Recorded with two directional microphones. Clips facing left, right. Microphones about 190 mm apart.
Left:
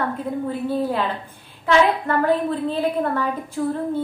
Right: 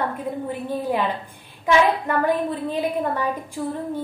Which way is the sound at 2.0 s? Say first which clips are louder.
Left 2 dB; 15° right (ahead or behind).